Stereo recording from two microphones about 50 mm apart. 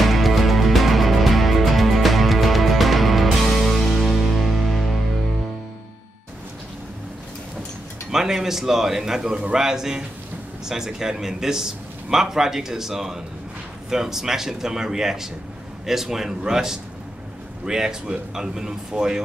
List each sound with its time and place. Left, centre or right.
0.0 s music: centre
8.1 s a man's voice: centre